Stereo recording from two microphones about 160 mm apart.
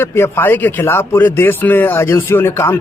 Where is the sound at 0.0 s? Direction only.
15° left (ahead or behind).